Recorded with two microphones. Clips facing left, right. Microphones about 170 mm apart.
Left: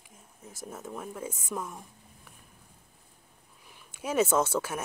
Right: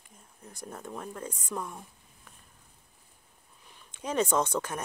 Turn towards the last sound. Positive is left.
turn(degrees=5)  # may be behind; listen again after turning